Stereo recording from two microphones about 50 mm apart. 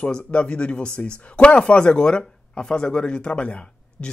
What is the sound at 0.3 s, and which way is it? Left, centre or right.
Speech, left.